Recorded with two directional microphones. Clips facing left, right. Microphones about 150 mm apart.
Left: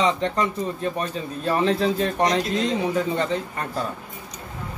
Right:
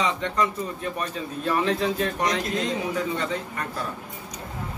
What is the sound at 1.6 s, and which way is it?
Speech, 30° left (ahead or behind).